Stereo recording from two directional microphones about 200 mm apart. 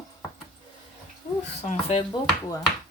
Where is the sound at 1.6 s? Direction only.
30° left (ahead or behind).